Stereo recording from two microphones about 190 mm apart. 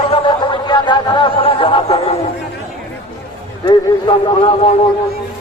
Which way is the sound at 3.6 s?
25° left (ahead or behind).